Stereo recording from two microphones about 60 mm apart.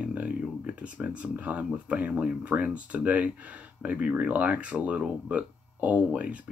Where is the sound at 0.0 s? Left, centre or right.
Right.